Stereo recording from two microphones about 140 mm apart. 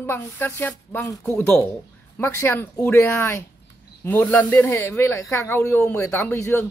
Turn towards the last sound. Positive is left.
turn(degrees=20)  # may be behind; listen again after turning